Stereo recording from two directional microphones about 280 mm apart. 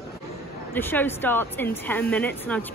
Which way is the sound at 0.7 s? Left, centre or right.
Centre.